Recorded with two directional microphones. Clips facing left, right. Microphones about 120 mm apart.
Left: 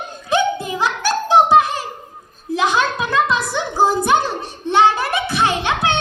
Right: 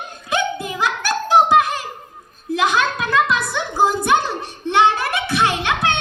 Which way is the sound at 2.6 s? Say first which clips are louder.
Left 1 dB; 30° left (ahead or behind).